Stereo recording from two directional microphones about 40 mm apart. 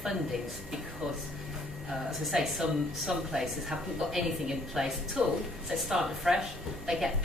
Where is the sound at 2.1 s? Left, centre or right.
Centre.